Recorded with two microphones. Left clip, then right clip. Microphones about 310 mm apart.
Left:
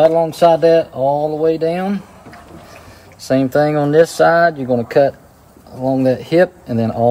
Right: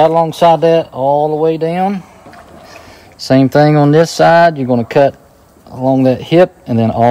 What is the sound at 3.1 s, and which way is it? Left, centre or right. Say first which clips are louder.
Speech: right 5 dB; right.